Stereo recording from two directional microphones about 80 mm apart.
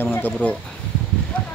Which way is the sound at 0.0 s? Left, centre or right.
Left.